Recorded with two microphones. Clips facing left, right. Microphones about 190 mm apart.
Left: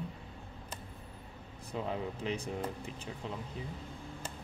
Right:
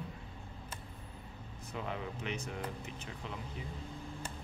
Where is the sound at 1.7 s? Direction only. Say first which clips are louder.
Left 4 dB; 35° left (ahead or behind).